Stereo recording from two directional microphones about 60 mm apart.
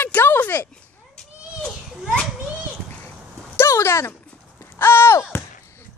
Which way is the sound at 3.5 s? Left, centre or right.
Left.